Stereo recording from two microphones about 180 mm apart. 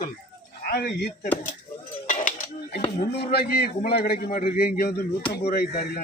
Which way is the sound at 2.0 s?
45° left (ahead or behind).